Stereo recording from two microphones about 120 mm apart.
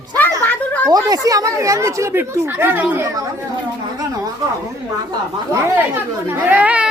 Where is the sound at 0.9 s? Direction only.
30° right (ahead or behind); by 3.0 s 15° right (ahead or behind).